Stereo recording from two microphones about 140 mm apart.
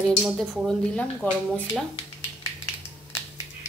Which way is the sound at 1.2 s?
15° left (ahead or behind).